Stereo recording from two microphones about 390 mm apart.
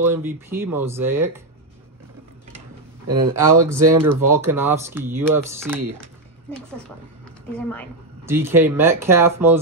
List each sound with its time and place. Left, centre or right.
0.0 s speech: centre
3.2 s speech: centre